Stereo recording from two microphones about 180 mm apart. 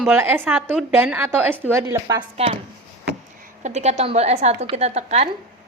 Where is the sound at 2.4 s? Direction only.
35° right (ahead or behind).